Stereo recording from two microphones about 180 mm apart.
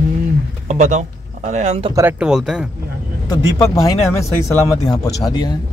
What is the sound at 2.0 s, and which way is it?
Speech, 10° right (ahead or behind).